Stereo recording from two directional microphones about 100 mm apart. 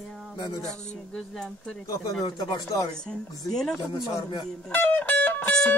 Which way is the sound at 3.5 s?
Centre (ahead or behind).